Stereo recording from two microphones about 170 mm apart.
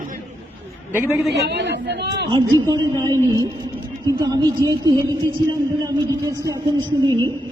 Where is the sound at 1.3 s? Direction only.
90° right.